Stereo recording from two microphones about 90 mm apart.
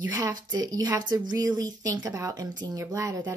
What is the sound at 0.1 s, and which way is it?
A woman's voice, 45° right (ahead or behind).